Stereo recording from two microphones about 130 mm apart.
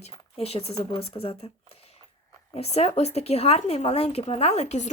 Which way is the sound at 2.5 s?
55° left (ahead or behind).